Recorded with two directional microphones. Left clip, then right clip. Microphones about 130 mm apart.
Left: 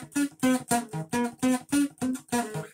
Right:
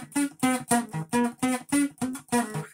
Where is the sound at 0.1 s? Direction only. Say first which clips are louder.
Even; 40° right (ahead or behind).